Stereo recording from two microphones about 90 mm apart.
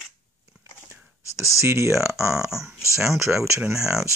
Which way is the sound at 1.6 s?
30° right (ahead or behind).